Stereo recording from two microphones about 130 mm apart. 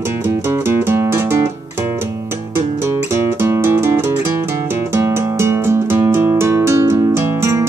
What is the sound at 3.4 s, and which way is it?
Music, 20° right (ahead or behind).